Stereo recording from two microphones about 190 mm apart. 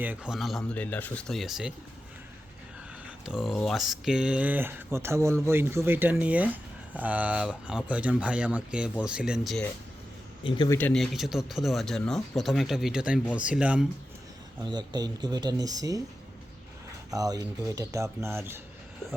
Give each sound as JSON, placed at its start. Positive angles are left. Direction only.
{"t": 0.0, "sound": "speech", "side_deg": -10}
{"t": 3.2, "sound": "speech", "side_deg": 0}
{"t": 10.7, "sound": "speech", "side_deg": 10}
{"t": 14.6, "sound": "speech", "side_deg": -20}
{"t": 17.1, "sound": "speech", "side_deg": -20}